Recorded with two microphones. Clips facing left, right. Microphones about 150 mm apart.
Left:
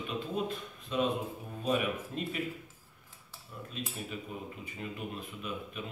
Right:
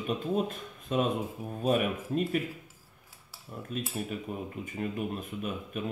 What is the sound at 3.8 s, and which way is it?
Speech, 50° right (ahead or behind).